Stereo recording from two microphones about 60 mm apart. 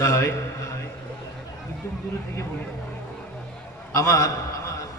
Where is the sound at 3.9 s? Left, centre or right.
Left.